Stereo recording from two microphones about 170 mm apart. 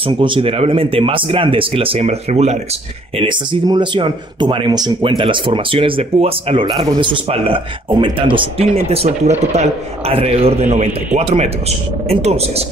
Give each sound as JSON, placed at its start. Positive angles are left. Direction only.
{"t": 0.0, "sound": "speech", "side_deg": -30}
{"t": 3.2, "sound": "speech", "side_deg": -30}